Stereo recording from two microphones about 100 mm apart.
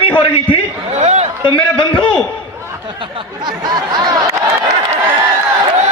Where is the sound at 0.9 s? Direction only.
90° right.